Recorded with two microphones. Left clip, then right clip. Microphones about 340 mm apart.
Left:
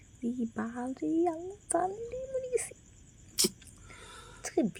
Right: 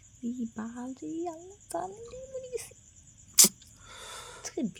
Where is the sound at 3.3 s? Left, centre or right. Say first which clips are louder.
Right 8 dB; right.